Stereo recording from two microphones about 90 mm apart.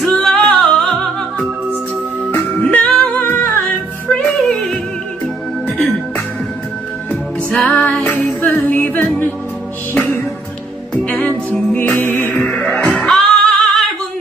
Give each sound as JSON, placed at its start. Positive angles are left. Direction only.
{"t": 0.0, "sound": "music", "side_deg": 5}
{"t": 2.3, "sound": "music", "side_deg": 15}
{"t": 3.2, "sound": "music", "side_deg": 25}
{"t": 4.2, "sound": "music", "side_deg": 5}
{"t": 7.1, "sound": "music", "side_deg": 15}
{"t": 11.2, "sound": "music", "side_deg": 15}